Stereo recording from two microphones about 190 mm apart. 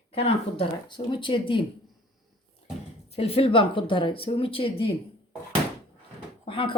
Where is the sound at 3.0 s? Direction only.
30° left (ahead or behind).